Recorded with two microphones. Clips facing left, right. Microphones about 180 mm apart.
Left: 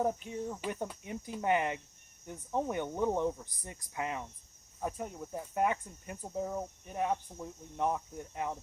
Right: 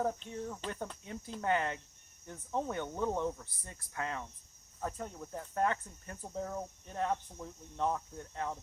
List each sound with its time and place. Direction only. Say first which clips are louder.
0.0 s speech: left 3 dB; 15° left (ahead or behind)